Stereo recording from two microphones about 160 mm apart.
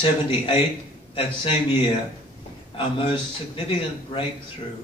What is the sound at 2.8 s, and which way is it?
Speech, 30° left (ahead or behind).